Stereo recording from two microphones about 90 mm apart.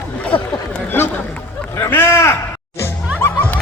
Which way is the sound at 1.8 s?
25° left (ahead or behind).